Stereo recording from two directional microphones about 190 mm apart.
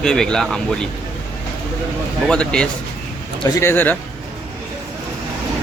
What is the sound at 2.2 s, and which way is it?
Speech, 5° left (ahead or behind).